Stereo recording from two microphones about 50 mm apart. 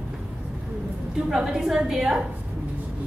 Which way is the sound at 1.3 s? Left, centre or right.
Centre.